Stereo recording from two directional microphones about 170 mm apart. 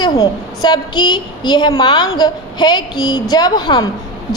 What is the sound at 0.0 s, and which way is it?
A woman's voice, 25° left (ahead or behind).